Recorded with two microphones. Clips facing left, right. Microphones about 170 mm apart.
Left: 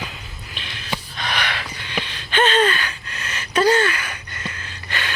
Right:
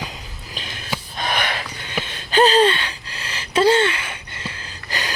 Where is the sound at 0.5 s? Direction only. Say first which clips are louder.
Even; 40° right (ahead or behind).